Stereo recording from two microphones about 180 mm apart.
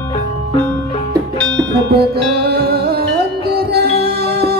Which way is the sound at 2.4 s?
65° right (ahead or behind).